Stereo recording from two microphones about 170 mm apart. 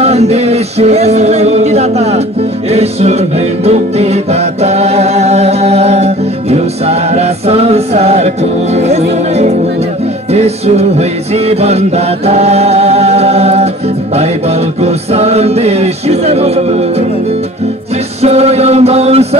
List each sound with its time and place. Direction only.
0.0 s music: 40° right (ahead or behind)
12.3 s a capella: 40° right (ahead or behind)
14.8 s music: 40° right (ahead or behind)
18.2 s music: 40° right (ahead or behind)